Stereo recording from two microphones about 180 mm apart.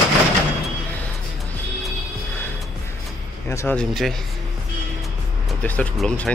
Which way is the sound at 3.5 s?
15° left (ahead or behind).